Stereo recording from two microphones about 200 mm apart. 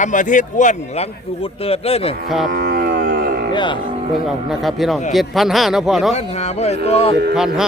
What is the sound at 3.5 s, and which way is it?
Speech, 25° left (ahead or behind).